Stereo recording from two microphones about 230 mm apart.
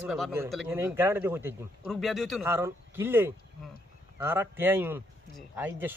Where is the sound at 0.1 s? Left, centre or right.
Centre.